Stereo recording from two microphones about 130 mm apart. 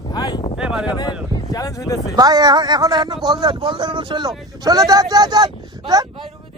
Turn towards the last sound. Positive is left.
turn(degrees=-30)  # may be behind; listen again after turning